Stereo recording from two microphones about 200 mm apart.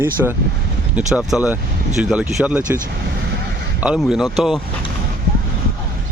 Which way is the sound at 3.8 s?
5° right (ahead or behind).